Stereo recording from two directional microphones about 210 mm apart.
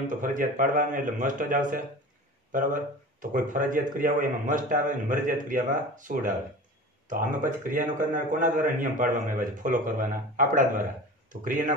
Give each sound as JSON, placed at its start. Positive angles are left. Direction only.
{"t": 0.1, "sound": "a man's voice", "side_deg": -40}